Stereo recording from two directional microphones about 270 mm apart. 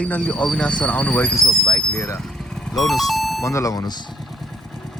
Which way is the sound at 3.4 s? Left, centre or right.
Centre.